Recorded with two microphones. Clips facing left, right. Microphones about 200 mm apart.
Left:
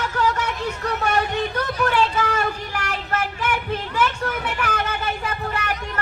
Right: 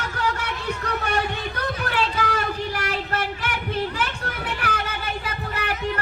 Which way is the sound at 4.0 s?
40° right (ahead or behind).